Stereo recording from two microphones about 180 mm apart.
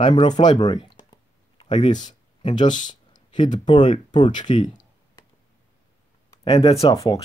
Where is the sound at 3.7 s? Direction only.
25° left (ahead or behind).